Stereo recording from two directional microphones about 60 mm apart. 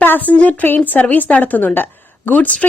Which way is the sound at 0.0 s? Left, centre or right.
Left.